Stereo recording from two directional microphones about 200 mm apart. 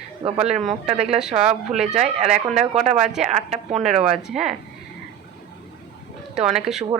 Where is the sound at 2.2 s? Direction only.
30° right (ahead or behind).